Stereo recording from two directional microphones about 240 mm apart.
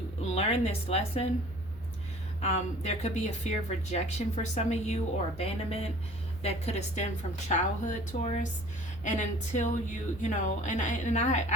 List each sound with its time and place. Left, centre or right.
0.3 s a woman's voice: left
2.4 s a woman's voice: left